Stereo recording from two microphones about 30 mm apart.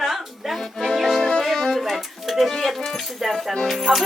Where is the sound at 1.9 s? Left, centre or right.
Centre.